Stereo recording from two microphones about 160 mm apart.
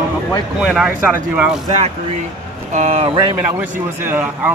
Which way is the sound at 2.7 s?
40° right (ahead or behind).